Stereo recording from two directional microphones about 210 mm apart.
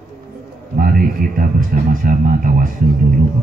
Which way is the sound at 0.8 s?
40° right (ahead or behind).